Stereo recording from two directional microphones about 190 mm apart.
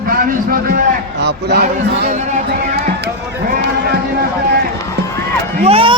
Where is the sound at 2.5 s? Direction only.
55° right (ahead or behind).